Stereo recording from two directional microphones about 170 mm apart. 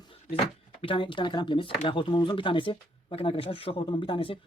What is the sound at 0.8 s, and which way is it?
A man's voice, 30° left (ahead or behind).